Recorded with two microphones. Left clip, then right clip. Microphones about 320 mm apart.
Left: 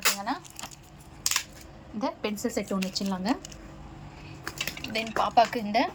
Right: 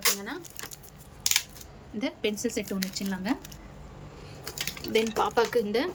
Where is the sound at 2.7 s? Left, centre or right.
Centre.